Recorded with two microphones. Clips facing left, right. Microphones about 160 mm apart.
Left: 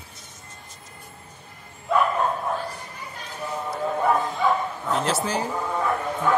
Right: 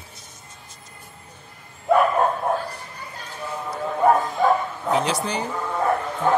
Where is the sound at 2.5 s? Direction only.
55° right (ahead or behind).